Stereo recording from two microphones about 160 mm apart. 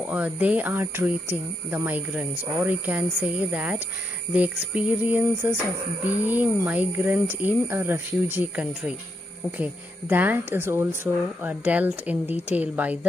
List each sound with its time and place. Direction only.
0.0 s speech: 10° right (ahead or behind)